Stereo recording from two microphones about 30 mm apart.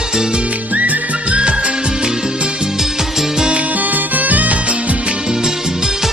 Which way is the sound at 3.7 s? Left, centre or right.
Right.